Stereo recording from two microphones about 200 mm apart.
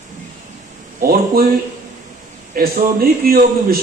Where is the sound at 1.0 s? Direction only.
45° right (ahead or behind).